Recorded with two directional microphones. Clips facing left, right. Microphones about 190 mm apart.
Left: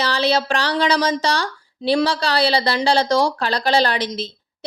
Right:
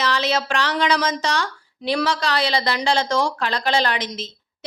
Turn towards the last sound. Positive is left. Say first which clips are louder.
# left 3 dB
turn(degrees=35)  # may be behind; listen again after turning